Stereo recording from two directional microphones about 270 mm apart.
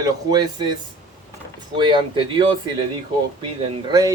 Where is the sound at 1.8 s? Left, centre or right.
Centre.